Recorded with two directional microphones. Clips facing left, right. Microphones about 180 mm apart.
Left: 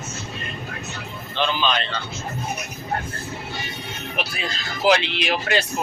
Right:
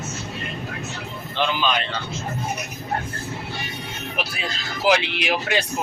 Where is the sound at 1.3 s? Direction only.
10° right (ahead or behind).